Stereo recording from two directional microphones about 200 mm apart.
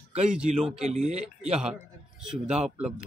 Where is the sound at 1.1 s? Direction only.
30° right (ahead or behind).